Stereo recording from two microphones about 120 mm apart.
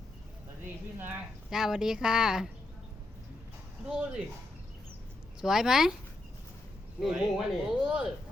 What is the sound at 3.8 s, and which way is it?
Speech, 10° right (ahead or behind).